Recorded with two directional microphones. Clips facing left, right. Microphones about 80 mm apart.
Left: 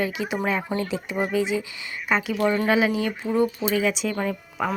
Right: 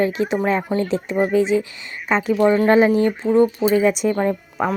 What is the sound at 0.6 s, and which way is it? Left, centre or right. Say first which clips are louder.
Speech: right 6 dB; centre.